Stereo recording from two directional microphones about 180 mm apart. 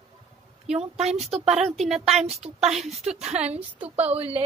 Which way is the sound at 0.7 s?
35° right (ahead or behind).